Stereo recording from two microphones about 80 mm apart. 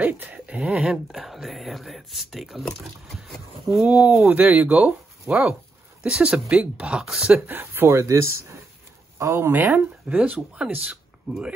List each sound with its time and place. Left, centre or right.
0.0 s speech: right
0.9 s speech: centre
3.8 s speech: centre
6.0 s speech: centre
7.4 s speech: right
11.3 s speech: centre